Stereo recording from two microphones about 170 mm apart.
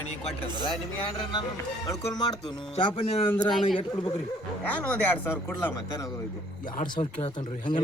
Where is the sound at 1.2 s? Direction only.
25° left (ahead or behind).